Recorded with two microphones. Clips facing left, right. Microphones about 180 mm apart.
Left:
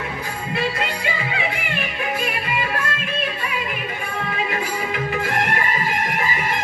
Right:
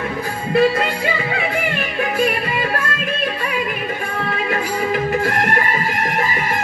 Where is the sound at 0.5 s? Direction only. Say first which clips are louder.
Right 10 dB; 45° right (ahead or behind).